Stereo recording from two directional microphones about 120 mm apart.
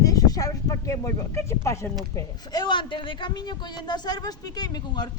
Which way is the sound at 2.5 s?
40° left (ahead or behind).